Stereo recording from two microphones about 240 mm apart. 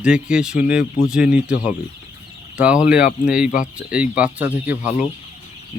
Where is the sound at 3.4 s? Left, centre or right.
Left.